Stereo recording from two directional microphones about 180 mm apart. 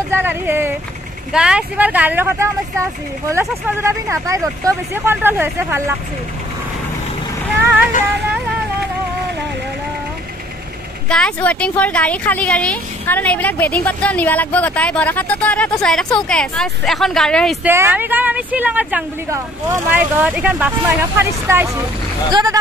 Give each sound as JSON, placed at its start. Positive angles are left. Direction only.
{"t": 0.1, "sound": "speech", "side_deg": -10}
{"t": 11.1, "sound": "a woman's voice", "side_deg": 5}
{"t": 17.6, "sound": "speech", "side_deg": -10}